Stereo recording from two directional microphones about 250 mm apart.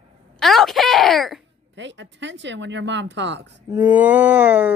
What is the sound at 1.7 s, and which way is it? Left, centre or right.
Speech, right.